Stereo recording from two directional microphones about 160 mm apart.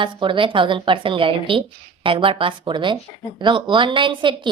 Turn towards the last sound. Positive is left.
turn(degrees=-30)  # may be behind; listen again after turning